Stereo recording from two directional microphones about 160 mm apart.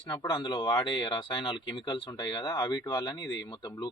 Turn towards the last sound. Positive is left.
turn(degrees=25)  # may be behind; listen again after turning